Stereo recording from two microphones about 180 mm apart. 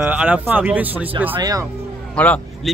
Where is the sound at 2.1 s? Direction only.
5° left (ahead or behind).